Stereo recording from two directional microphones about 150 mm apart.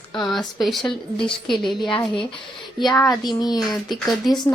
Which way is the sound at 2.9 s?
25° left (ahead or behind).